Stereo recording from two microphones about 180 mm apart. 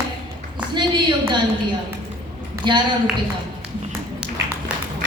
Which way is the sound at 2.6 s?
25° right (ahead or behind).